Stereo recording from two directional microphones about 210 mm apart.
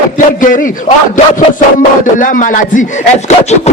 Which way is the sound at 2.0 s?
40° left (ahead or behind).